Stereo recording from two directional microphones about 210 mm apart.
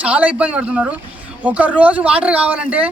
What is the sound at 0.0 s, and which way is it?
Speech, 5° right (ahead or behind).